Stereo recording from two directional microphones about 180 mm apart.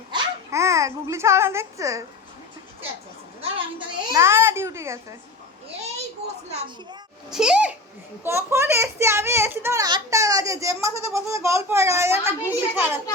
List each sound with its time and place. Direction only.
0.1 s a child's voice: 15° right (ahead or behind)
3.4 s speech: 30° right (ahead or behind)
4.2 s a child's voice: 15° right (ahead or behind)
7.3 s a child's voice: 5° right (ahead or behind)